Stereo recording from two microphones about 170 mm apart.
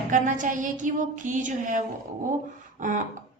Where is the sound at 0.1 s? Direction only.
50° right (ahead or behind).